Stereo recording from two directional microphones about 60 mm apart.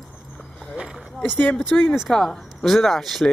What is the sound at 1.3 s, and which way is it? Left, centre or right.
Speech, left.